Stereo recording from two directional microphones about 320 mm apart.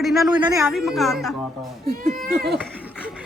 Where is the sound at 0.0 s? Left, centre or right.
Centre.